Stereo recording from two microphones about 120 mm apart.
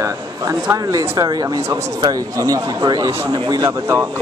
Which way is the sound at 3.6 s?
20° right (ahead or behind).